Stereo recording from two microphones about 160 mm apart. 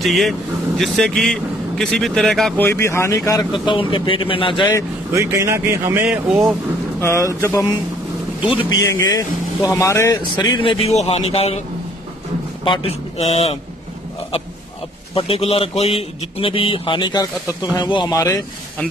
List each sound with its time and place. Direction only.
0.0 s speech: centre (ahead or behind)
2.6 s speech: 15° left (ahead or behind)
3.5 s a man's voice: 30° left (ahead or behind)
5.1 s speech: 20° right (ahead or behind)
7.0 s speech: 15° left (ahead or behind)
8.4 s speech: 30° left (ahead or behind)
10.3 s a man's voice: 30° left (ahead or behind)
12.6 s a man's voice: 35° left (ahead or behind)
15.1 s a man's voice: 35° left (ahead or behind); by 18.4 s 20° left (ahead or behind)